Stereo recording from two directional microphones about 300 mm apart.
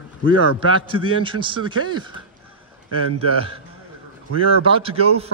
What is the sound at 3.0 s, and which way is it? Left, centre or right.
Speech, right.